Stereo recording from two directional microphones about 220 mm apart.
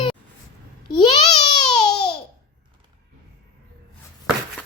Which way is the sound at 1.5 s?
20° left (ahead or behind).